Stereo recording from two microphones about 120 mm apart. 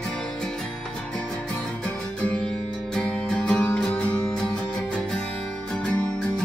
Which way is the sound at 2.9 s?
5° left (ahead or behind).